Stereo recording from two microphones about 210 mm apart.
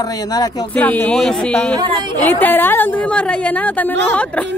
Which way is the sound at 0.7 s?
5° left (ahead or behind).